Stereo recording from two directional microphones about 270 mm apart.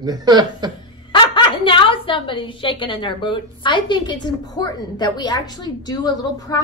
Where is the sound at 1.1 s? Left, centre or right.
Centre.